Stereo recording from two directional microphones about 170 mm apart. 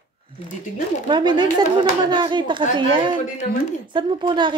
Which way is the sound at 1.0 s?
25° right (ahead or behind).